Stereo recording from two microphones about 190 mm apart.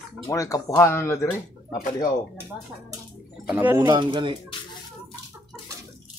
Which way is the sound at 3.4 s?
10° right (ahead or behind).